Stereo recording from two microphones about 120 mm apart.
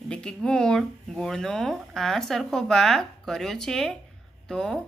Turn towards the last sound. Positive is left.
turn(degrees=5)  # may be behind; listen again after turning